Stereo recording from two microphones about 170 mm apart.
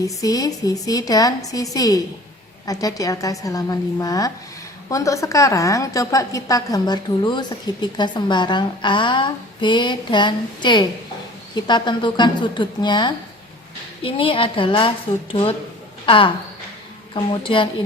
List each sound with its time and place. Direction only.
0.0 s a woman's voice: 20° left (ahead or behind)